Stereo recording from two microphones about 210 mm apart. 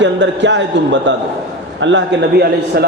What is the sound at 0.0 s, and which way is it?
A man's voice, 60° right (ahead or behind).